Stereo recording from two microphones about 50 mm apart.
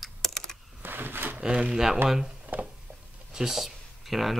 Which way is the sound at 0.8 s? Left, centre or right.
Right.